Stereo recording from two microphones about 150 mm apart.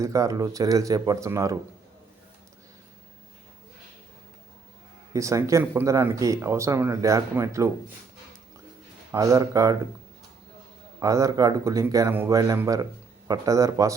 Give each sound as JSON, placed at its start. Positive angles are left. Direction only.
{"t": 0.0, "sound": "speech", "side_deg": -20}
{"t": 5.1, "sound": "speech", "side_deg": -20}
{"t": 9.1, "sound": "speech", "side_deg": -20}
{"t": 11.0, "sound": "speech", "side_deg": -20}